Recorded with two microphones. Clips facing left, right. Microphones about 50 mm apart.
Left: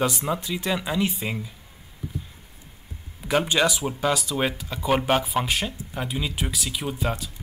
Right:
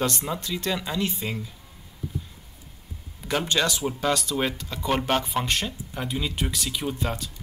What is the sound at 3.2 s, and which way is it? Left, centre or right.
Speech, centre.